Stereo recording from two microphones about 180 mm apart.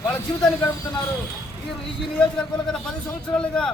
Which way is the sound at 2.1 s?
5° left (ahead or behind).